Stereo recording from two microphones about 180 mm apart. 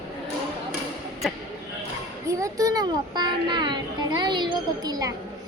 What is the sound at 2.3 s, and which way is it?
A child's voice, 20° right (ahead or behind).